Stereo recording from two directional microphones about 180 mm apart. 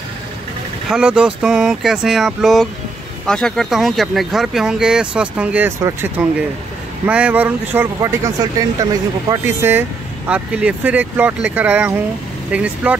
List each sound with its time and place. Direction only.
0.8 s speech: 5° right (ahead or behind)